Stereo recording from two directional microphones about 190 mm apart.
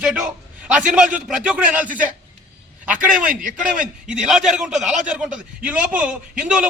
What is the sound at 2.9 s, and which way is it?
Speech, 45° right (ahead or behind).